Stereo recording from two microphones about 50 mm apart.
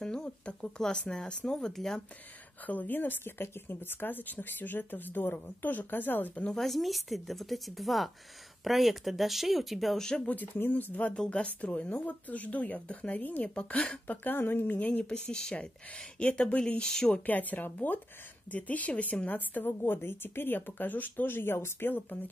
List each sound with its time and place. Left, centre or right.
0.0 s speech: centre
2.6 s speech: left
6.5 s a woman's voice: centre
10.2 s speech: left
14.9 s speech: left
17.3 s a woman's voice: left
21.8 s speech: left